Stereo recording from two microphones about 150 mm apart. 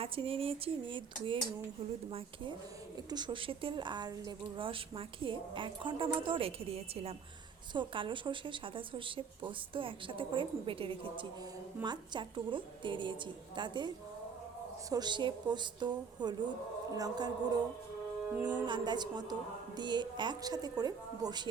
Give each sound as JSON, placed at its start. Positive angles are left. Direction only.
{"t": 0.0, "sound": "a woman's voice", "side_deg": -40}
{"t": 7.7, "sound": "a woman's voice", "side_deg": -35}
{"t": 18.3, "sound": "speech", "side_deg": -10}
{"t": 18.6, "sound": "a woman's voice", "side_deg": -30}